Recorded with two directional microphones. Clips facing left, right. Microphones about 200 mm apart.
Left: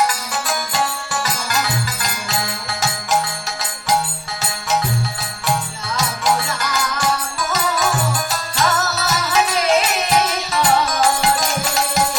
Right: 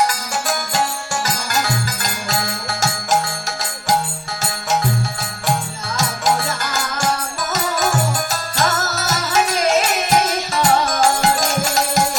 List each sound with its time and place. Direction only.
0.4 s music: 45° right (ahead or behind)
6.0 s music: 45° right (ahead or behind)